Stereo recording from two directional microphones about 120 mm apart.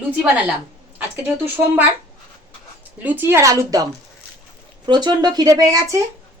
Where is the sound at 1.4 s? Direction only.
15° right (ahead or behind).